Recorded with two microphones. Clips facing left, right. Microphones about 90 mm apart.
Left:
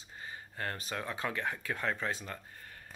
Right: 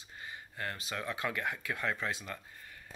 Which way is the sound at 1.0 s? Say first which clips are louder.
Right 1 dB; 30° left (ahead or behind).